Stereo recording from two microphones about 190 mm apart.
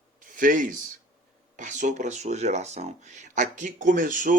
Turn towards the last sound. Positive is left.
turn(degrees=-45)  # may be behind; listen again after turning